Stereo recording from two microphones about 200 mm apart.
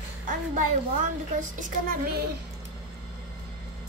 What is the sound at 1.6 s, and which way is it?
Speech, 45° right (ahead or behind).